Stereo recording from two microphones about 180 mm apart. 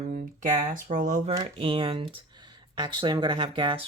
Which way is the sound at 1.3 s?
25° right (ahead or behind).